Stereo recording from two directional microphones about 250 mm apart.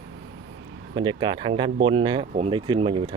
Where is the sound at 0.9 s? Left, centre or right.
Centre.